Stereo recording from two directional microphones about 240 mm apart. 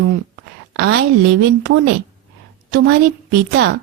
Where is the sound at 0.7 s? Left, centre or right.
Right.